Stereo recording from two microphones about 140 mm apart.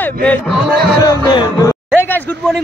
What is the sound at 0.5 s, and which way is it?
Speech, centre (ahead or behind).